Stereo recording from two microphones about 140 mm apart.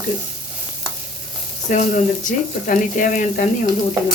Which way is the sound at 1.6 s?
65° left (ahead or behind).